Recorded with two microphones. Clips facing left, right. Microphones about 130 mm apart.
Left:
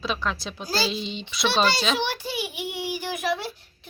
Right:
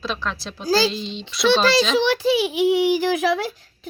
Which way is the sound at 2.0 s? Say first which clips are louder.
Right 10 dB; 90° right.